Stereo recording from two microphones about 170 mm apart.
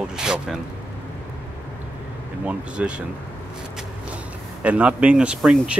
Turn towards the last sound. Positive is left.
turn(degrees=-5)  # may be behind; listen again after turning